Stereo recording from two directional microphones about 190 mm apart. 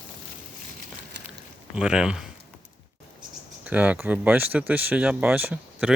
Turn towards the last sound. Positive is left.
turn(degrees=-5)  # may be behind; listen again after turning